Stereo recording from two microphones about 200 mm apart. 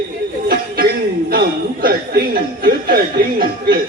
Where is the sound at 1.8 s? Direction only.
50° right (ahead or behind).